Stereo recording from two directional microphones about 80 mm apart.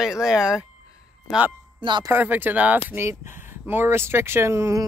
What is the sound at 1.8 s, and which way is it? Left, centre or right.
Speech, right.